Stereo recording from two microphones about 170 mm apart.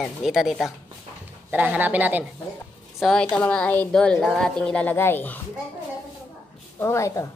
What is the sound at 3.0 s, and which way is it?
A woman's voice, 5° left (ahead or behind).